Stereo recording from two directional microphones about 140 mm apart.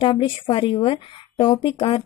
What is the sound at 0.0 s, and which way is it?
A woman's voice, 35° left (ahead or behind).